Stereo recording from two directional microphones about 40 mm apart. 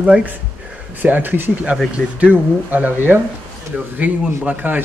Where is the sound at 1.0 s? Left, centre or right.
Right.